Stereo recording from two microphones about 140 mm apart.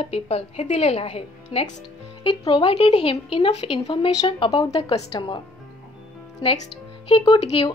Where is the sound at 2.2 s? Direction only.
35° left (ahead or behind).